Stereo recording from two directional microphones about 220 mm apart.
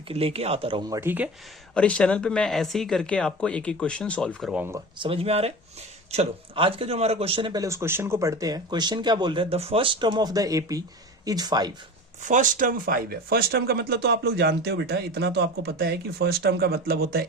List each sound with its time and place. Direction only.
0.1 s speech: 25° right (ahead or behind); by 1.3 s 10° right (ahead or behind)
1.7 s speech: 5° left (ahead or behind)
4.9 s speech: 25° right (ahead or behind)
12.2 s speech: 35° right (ahead or behind)